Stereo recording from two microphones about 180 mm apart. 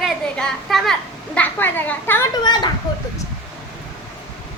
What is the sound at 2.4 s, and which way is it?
Speech, 25° left (ahead or behind).